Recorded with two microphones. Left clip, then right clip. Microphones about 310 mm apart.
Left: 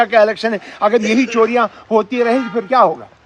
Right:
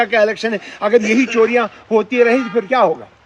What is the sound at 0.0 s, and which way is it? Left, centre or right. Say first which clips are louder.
A man's voice: left 2 dB; centre.